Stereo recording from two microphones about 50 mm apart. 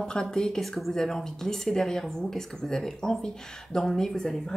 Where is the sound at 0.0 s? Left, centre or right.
Centre.